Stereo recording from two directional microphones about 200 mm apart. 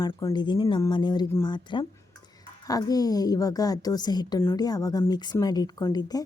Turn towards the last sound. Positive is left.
turn(degrees=20)  # may be behind; listen again after turning